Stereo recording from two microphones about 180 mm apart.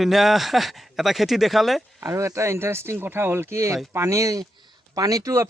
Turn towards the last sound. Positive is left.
turn(degrees=-15)  # may be behind; listen again after turning